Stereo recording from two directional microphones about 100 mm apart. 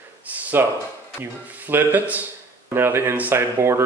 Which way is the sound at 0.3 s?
20° right (ahead or behind).